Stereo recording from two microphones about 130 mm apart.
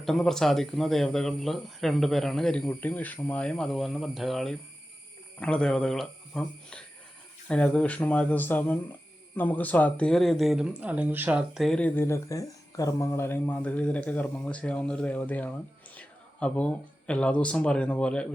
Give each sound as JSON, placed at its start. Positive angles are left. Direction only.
{"t": 0.0, "sound": "speech", "side_deg": 5}